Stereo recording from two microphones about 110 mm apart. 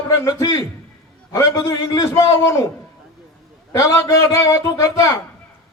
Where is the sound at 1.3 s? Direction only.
25° left (ahead or behind).